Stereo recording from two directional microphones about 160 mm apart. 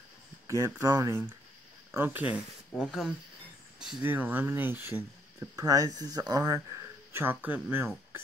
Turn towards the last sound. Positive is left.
turn(degrees=-10)  # may be behind; listen again after turning